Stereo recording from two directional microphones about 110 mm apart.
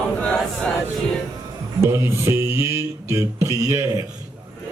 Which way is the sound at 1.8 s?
25° right (ahead or behind).